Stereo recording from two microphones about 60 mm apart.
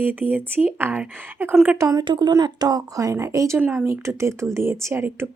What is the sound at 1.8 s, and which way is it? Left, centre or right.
A woman's voice, right.